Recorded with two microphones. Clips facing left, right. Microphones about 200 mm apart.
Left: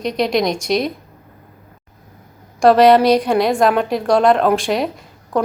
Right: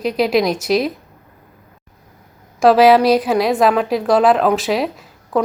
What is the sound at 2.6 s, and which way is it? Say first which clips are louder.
A woman's voice: even; 5° right (ahead or behind).